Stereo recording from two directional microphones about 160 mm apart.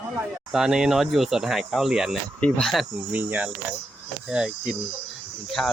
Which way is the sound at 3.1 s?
10° right (ahead or behind).